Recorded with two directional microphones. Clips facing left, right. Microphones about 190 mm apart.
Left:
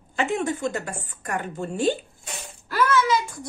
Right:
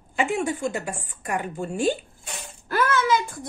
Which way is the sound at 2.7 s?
55° right (ahead or behind).